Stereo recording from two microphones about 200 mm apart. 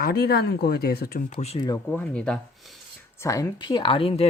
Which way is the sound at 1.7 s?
10° left (ahead or behind).